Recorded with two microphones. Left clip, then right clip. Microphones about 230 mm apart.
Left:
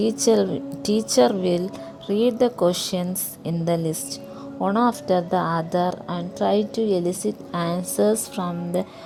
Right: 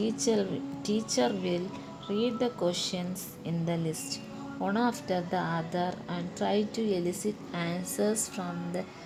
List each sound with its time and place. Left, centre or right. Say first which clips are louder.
0.0 s a woman's voice: left 10 dB; left